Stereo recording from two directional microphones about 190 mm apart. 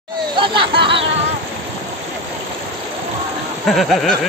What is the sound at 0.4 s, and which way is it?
Speech, 25° right (ahead or behind).